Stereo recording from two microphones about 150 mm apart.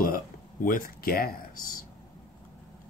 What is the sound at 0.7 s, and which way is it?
Speech, 70° left (ahead or behind).